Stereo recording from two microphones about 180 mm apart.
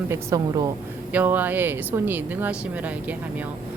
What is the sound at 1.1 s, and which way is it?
A woman's voice, 10° right (ahead or behind).